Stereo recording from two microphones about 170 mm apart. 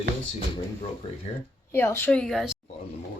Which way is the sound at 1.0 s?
30° left (ahead or behind).